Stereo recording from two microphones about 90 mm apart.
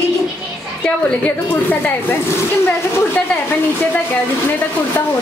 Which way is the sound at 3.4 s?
20° left (ahead or behind).